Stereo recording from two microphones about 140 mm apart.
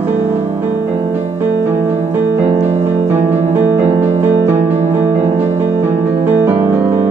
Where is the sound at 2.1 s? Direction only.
15° right (ahead or behind).